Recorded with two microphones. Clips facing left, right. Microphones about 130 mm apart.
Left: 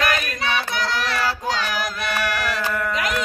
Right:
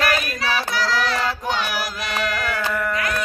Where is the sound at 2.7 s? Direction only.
Centre (ahead or behind).